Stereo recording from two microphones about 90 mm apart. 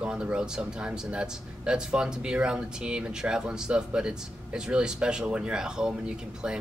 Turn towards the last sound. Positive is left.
turn(degrees=-10)  # may be behind; listen again after turning